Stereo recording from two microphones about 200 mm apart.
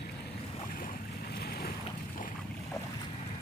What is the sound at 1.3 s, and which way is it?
Boat, 50° left (ahead or behind).